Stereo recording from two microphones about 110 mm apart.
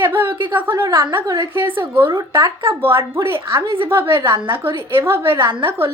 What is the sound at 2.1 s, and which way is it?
Speech, 35° right (ahead or behind).